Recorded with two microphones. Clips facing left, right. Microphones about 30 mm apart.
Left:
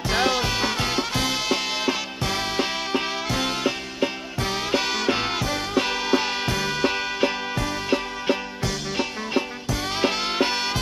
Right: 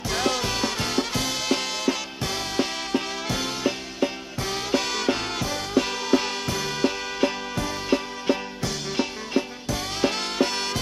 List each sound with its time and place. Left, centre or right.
0.1 s music: centre
3.3 s music: centre
9.7 s music: centre